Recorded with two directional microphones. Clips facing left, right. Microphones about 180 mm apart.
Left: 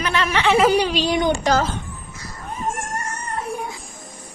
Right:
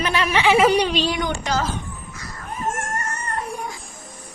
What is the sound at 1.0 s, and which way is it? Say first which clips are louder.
Speech: left 4 dB; 20° left (ahead or behind).